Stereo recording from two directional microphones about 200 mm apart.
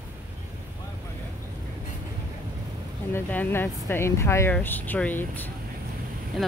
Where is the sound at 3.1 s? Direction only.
10° left (ahead or behind).